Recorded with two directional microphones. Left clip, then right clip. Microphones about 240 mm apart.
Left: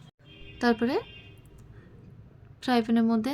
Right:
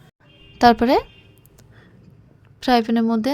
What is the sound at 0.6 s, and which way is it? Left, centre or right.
Speech, right.